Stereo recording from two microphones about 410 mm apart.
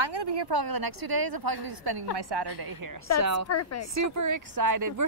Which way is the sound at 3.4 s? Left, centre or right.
Left.